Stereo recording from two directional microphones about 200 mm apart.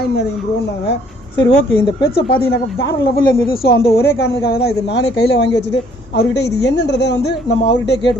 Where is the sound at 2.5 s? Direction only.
55° left (ahead or behind).